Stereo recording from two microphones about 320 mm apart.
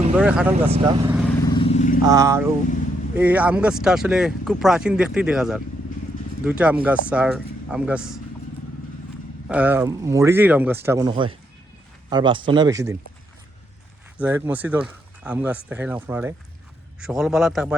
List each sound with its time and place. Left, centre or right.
0.2 s speech: centre
0.7 s speech: centre
1.5 s vehicle: centre
2.0 s speech: centre
9.5 s speech: centre
14.2 s speech: centre